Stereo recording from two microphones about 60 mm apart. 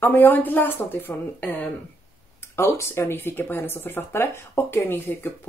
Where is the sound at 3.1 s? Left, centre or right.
Left.